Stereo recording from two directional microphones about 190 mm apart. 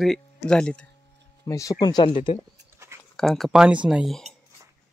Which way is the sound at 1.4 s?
15° left (ahead or behind).